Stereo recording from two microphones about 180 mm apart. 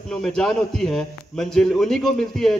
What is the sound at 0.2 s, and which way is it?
A man's voice, centre (ahead or behind).